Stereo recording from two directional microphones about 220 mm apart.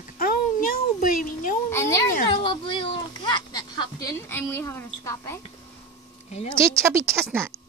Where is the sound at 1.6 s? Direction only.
10° left (ahead or behind).